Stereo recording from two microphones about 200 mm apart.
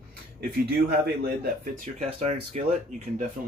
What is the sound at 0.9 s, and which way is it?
Speech, 50° right (ahead or behind).